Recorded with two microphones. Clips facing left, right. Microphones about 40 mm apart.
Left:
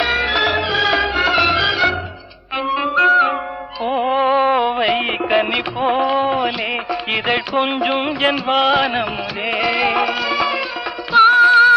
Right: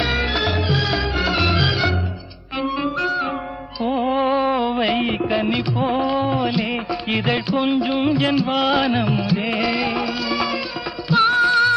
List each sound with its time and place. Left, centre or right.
0.3 s music: left
1.5 s music: centre
2.6 s music: left
2.9 s music: left
3.8 s music: left
8.5 s music: centre
9.7 s music: left